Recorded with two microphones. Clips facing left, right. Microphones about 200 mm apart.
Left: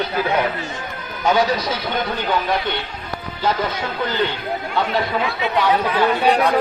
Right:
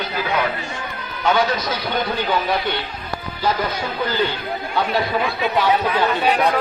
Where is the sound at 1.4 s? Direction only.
30° left (ahead or behind).